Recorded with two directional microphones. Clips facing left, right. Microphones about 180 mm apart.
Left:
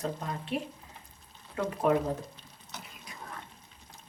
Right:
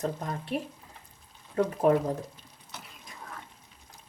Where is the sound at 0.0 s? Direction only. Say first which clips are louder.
Right 2 dB; 40° right (ahead or behind).